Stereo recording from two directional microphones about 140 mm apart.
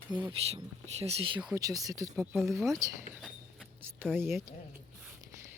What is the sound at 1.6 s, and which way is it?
Speech, 25° right (ahead or behind).